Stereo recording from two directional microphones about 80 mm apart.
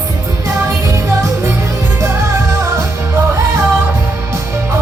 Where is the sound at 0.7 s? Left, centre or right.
Right.